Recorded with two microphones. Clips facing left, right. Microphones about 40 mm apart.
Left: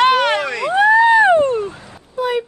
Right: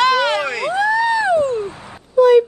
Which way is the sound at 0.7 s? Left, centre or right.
Left.